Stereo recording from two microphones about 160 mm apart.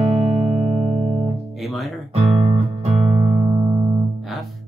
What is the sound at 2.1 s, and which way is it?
Music, 40° right (ahead or behind).